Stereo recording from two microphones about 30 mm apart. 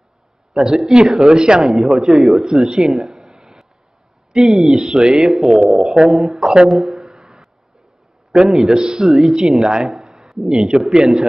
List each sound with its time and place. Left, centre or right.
0.5 s speech: centre
1.6 s speech: centre
1.9 s speech: centre
3.1 s a sound: right
4.3 s a man's voice: right
6.2 s speech: right
6.7 s a sound: right
8.3 s speech: centre
9.0 s speech: centre
9.6 s speech: right
9.9 s a sound: right
10.3 s speech: centre